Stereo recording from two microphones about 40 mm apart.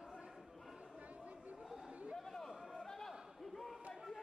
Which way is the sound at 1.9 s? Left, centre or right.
Right.